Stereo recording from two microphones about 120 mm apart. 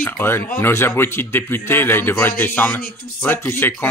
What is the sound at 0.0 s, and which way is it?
Speech, 20° left (ahead or behind).